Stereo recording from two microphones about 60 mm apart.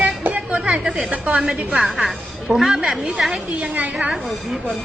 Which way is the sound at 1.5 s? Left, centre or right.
Centre.